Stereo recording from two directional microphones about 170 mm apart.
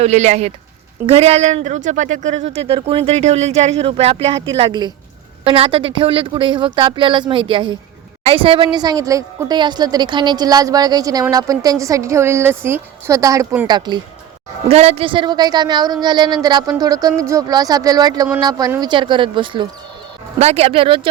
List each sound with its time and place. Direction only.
0.0 s a woman's voice: 40° right (ahead or behind); by 13.7 s 15° right (ahead or behind)
13.7 s a woman's voice: 25° right (ahead or behind)
14.7 s a woman's voice: 35° right (ahead or behind)